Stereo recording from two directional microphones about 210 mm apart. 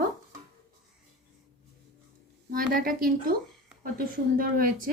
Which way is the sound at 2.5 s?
40° right (ahead or behind).